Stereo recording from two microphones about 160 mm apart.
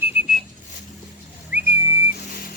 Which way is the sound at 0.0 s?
10° right (ahead or behind).